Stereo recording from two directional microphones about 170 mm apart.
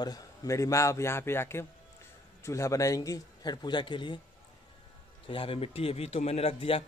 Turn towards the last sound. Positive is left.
turn(degrees=35)  # may be behind; listen again after turning